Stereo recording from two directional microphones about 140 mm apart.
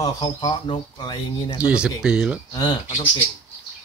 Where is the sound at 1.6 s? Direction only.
5° right (ahead or behind).